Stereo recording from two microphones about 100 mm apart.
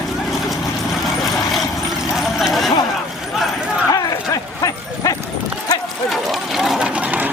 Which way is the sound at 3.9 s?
35° left (ahead or behind).